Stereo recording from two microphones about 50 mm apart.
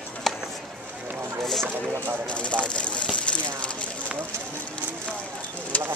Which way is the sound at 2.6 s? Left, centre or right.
Left.